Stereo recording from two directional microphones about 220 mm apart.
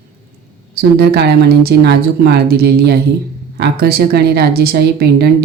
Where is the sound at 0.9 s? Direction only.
45° right (ahead or behind).